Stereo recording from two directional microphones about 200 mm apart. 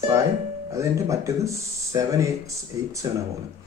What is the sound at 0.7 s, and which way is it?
Speech, 15° right (ahead or behind).